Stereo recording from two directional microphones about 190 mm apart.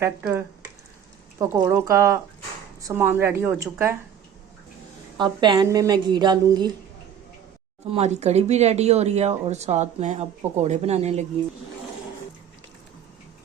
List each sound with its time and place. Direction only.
0.0 s a woman's voice: 10° right (ahead or behind)
1.4 s a woman's voice: 20° right (ahead or behind)
5.1 s a woman's voice: 25° right (ahead or behind)
7.9 s speech: 35° right (ahead or behind)